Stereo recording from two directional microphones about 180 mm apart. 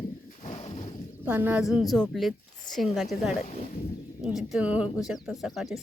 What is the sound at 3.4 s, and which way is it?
Speech, 35° left (ahead or behind).